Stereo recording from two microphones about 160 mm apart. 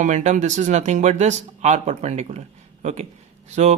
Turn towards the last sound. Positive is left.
turn(degrees=-45)  # may be behind; listen again after turning